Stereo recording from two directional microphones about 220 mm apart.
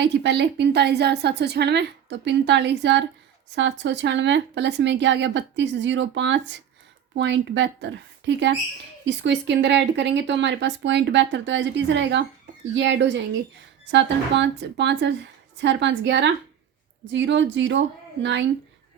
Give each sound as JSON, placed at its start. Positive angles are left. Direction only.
{"t": 0.0, "sound": "a woman's voice", "side_deg": -50}